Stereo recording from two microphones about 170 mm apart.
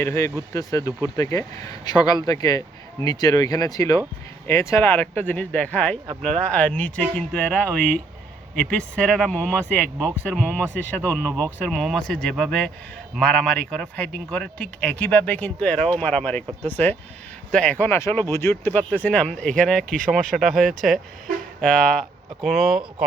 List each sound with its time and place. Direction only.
0.0 s speech: 15° left (ahead or behind)
11.3 s speech: 20° right (ahead or behind)
11.6 s speech: centre (ahead or behind)